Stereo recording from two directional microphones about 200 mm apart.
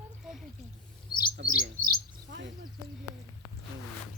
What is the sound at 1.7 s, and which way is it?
Speech, 50° right (ahead or behind).